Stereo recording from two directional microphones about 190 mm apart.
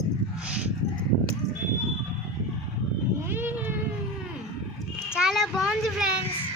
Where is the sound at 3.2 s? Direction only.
10° right (ahead or behind).